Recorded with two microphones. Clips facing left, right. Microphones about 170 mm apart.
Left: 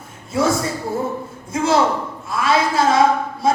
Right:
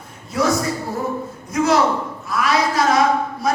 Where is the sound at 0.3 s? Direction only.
25° left (ahead or behind).